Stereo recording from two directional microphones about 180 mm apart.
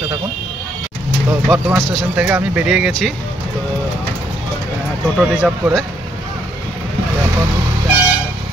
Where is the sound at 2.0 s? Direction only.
10° right (ahead or behind).